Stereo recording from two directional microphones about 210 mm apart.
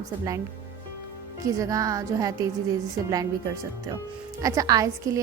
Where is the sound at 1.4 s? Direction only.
15° right (ahead or behind).